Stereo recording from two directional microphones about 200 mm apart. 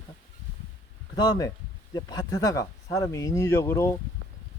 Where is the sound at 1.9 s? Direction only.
20° left (ahead or behind).